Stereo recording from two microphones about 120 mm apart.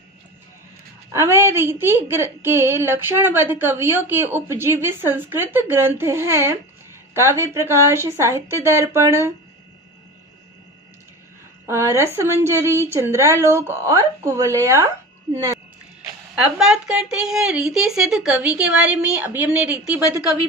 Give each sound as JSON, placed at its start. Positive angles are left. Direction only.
{"t": 1.1, "sound": "speech", "side_deg": -20}
{"t": 11.6, "sound": "speech", "side_deg": -25}
{"t": 16.3, "sound": "a woman's voice", "side_deg": -5}